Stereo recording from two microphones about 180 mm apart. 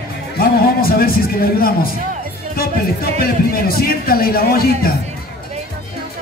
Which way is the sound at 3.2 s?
55° left (ahead or behind).